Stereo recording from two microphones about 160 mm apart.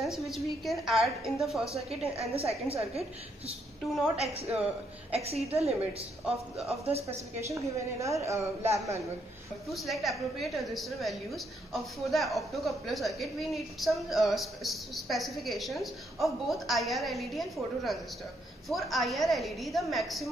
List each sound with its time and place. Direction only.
0.0 s a woman's voice: centre (ahead or behind)
2.1 s a woman's voice: 40° right (ahead or behind)
7.1 s a woman's voice: 15° right (ahead or behind)
9.7 s a woman's voice: centre (ahead or behind)